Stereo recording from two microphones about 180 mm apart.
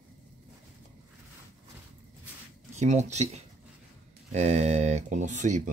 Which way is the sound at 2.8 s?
40° right (ahead or behind).